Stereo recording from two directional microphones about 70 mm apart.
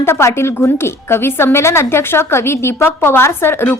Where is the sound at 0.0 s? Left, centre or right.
Left.